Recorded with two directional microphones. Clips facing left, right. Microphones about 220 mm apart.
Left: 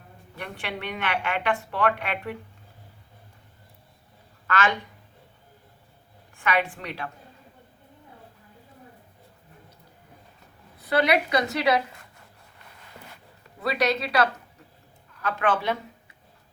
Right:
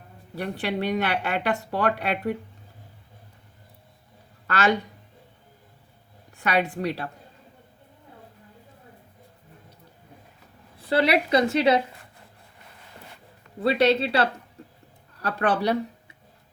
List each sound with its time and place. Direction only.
0.3 s speech: 35° right (ahead or behind)
4.4 s a woman's voice: 35° right (ahead or behind)
6.4 s speech: 40° right (ahead or behind)
10.8 s a woman's voice: 30° right (ahead or behind)
13.6 s a woman's voice: 30° right (ahead or behind)